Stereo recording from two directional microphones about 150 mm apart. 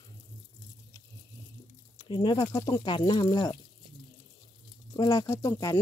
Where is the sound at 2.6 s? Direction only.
20° left (ahead or behind).